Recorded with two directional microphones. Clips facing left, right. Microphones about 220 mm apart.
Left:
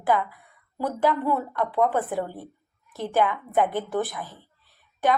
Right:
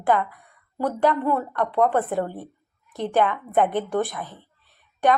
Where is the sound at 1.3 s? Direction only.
10° left (ahead or behind).